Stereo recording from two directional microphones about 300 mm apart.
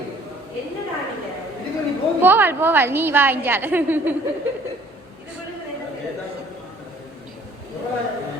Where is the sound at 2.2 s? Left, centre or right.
Centre.